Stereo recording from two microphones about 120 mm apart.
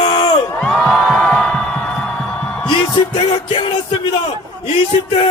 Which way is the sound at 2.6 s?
40° left (ahead or behind).